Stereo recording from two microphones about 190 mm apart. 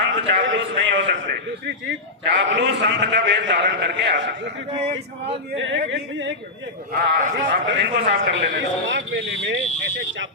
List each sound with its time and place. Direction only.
0.1 s a man's voice: 75° right (ahead or behind)
4.8 s speech: 30° right (ahead or behind)
5.5 s a man's voice: 80° right
6.9 s speech: 50° right (ahead or behind)
7.3 s a man's voice: 65° right (ahead or behind)
8.1 s a man's voice: 75° right (ahead or behind)